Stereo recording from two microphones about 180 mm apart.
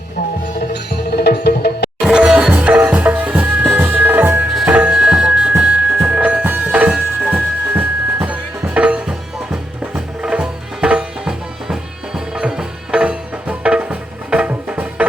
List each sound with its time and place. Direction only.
0.7 s music: 65° left (ahead or behind)
2.0 s music: 5° right (ahead or behind)